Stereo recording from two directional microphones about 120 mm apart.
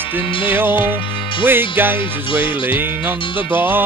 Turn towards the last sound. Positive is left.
turn(degrees=-20)  # may be behind; listen again after turning